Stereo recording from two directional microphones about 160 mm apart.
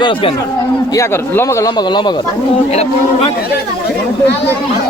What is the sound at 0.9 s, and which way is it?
A man's voice, 15° left (ahead or behind).